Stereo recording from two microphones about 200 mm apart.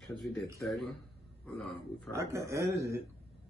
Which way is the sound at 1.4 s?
5° left (ahead or behind).